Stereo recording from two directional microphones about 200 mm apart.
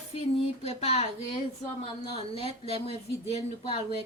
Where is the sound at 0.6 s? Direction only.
30° left (ahead or behind).